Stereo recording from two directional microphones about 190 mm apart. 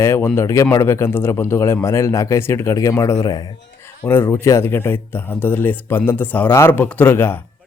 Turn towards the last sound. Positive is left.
turn(degrees=10)  # may be behind; listen again after turning